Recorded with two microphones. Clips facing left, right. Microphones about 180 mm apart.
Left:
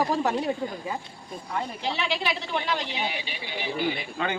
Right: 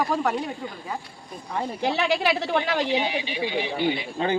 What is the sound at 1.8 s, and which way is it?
A woman's voice, 55° right (ahead or behind).